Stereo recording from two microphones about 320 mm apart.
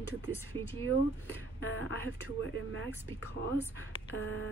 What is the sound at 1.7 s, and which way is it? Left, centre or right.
Speech, right.